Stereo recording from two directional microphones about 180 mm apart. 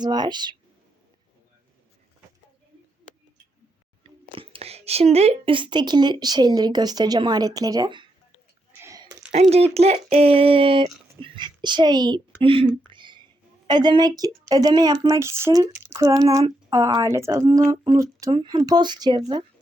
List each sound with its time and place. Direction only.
0.0 s speech: 25° right (ahead or behind)
4.0 s speech: 30° right (ahead or behind)
8.8 s a sound: 20° right (ahead or behind)
9.3 s a child's voice: 35° right (ahead or behind)
12.9 s a sound: 25° right (ahead or behind)
13.7 s speech: 25° right (ahead or behind)